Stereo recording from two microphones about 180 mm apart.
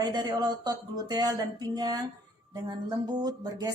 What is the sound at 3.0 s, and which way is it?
Speech, 20° right (ahead or behind).